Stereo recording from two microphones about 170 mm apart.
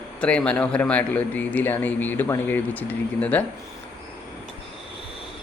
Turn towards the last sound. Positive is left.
turn(degrees=10)  # may be behind; listen again after turning